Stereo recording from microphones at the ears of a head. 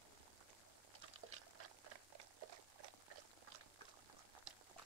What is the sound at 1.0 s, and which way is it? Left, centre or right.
Boiling, right.